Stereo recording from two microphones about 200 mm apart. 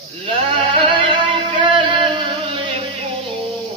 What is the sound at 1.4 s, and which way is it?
Music, 25° right (ahead or behind).